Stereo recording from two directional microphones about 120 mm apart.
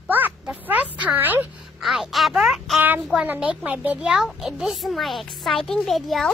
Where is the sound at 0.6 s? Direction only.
10° right (ahead or behind).